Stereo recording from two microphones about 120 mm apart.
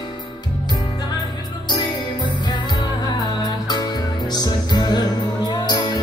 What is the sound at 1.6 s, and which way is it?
Music, 40° left (ahead or behind).